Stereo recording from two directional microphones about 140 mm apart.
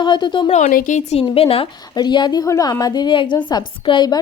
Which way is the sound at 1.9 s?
30° left (ahead or behind).